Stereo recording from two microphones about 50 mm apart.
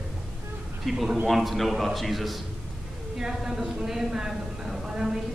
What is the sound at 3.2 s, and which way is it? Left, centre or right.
A woman's voice, centre.